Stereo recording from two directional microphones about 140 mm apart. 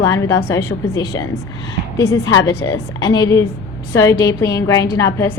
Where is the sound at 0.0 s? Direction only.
20° left (ahead or behind).